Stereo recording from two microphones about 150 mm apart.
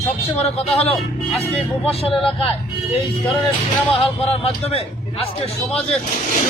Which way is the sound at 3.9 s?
40° left (ahead or behind).